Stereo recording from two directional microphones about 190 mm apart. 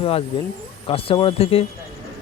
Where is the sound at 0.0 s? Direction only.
30° left (ahead or behind).